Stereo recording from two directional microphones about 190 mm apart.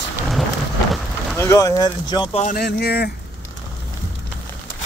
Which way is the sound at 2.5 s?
55° left (ahead or behind).